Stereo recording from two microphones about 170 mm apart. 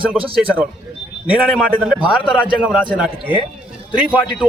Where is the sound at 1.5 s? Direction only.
5° right (ahead or behind).